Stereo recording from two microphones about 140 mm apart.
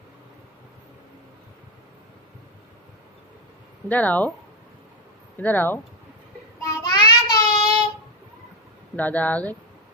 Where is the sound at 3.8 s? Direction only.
10° left (ahead or behind).